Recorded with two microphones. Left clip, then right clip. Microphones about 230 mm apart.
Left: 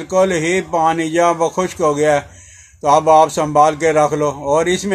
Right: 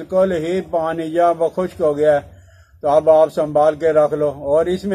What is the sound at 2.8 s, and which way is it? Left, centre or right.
Speech, left.